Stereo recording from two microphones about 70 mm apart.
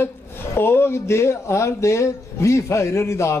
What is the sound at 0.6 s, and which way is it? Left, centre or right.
Speech, left.